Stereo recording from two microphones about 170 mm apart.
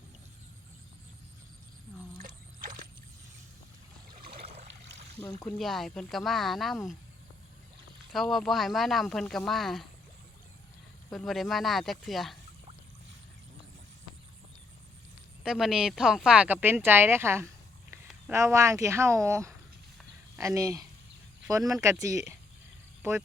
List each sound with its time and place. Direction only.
2.2 s a sound: 55° right (ahead or behind)
4.6 s a sound: 85° right
5.2 s speech: 25° left (ahead or behind)
5.5 s speech: centre (ahead or behind)
8.1 s speech: centre (ahead or behind)
11.1 s speech: centre (ahead or behind)
15.4 s speech: centre (ahead or behind); by 22.2 s 20° right (ahead or behind)